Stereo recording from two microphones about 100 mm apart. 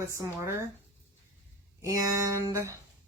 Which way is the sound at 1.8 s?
35° right (ahead or behind).